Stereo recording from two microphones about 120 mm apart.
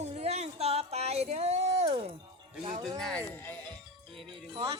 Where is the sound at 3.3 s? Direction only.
15° left (ahead or behind).